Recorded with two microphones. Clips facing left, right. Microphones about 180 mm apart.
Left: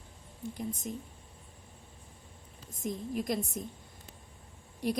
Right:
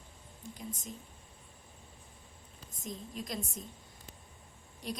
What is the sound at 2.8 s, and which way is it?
Speech, 60° left (ahead or behind).